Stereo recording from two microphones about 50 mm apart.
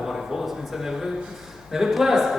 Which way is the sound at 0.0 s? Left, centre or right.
Centre.